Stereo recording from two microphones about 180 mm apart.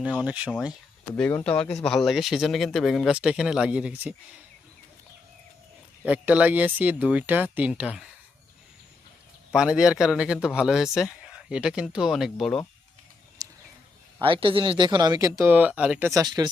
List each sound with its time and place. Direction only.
0.1 s speech: 5° right (ahead or behind)
1.1 s speech: 10° left (ahead or behind); by 4.1 s 5° right (ahead or behind)
6.1 s speech: 10° right (ahead or behind)
9.5 s speech: 5° right (ahead or behind)
13.4 s a sound: 20° right (ahead or behind)
14.2 s speech: 30° right (ahead or behind)